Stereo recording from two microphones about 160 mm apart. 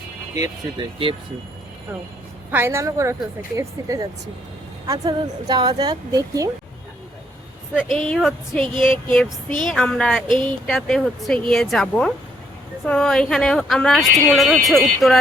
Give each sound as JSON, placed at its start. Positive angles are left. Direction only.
{"t": 0.3, "sound": "speech", "side_deg": -20}
{"t": 2.5, "sound": "a woman's voice", "side_deg": -15}
{"t": 7.8, "sound": "speech", "side_deg": 0}
{"t": 8.6, "sound": "speech", "side_deg": -30}
{"t": 9.6, "sound": "speech", "side_deg": 5}
{"t": 10.2, "sound": "speech", "side_deg": -30}
{"t": 10.7, "sound": "speech", "side_deg": 0}